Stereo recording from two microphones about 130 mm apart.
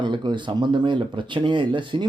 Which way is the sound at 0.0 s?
35° right (ahead or behind).